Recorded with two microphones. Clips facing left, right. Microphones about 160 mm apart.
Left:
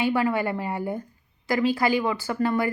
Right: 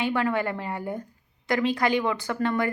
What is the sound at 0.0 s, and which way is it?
Speech, 10° left (ahead or behind).